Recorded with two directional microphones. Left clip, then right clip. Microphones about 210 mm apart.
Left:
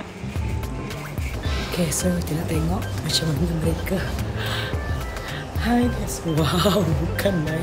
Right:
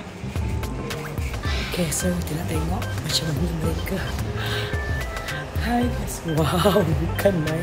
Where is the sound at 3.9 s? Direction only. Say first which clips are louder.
Left 2 dB; 10° left (ahead or behind).